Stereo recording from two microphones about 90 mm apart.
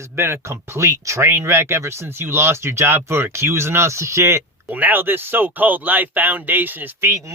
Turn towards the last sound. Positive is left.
turn(degrees=-30)  # may be behind; listen again after turning